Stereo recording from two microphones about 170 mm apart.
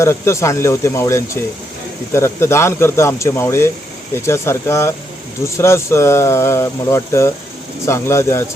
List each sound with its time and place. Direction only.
0.0 s speech: 15° left (ahead or behind)